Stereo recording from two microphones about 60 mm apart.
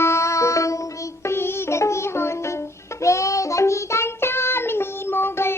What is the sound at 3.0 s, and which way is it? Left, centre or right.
Child singing, left.